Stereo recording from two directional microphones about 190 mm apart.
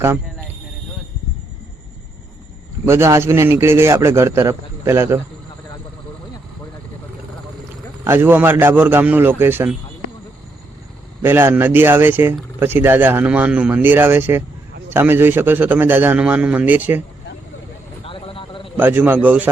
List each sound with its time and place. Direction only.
2.8 s a man's voice: 15° right (ahead or behind)
8.0 s a man's voice: 10° right (ahead or behind)
11.2 s a man's voice: 10° right (ahead or behind)
18.0 s a sound: 30° left (ahead or behind)
18.8 s a man's voice: 10° right (ahead or behind)